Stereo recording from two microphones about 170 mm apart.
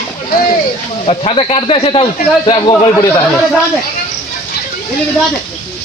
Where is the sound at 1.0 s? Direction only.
35° left (ahead or behind).